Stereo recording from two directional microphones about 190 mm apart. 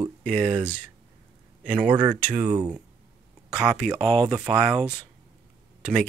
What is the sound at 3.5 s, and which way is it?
Speech, centre (ahead or behind).